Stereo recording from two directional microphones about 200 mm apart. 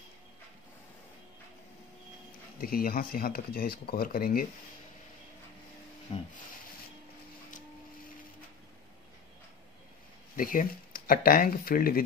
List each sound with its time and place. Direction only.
2.6 s speech: 50° left (ahead or behind)
6.1 s a sound: 30° left (ahead or behind)
10.3 s speech: 45° left (ahead or behind)